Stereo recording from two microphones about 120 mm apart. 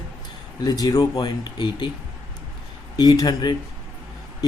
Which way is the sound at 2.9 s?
35° left (ahead or behind).